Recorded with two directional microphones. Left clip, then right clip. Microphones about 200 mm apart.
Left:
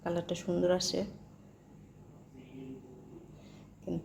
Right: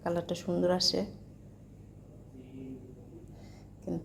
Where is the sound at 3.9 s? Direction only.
5° right (ahead or behind).